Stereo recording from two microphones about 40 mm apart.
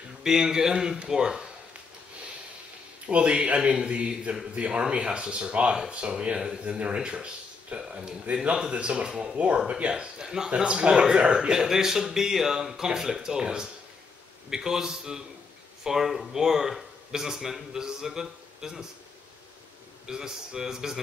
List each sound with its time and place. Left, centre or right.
0.2 s speech: centre
3.1 s speech: right
11.5 s speech: centre
20.1 s speech: centre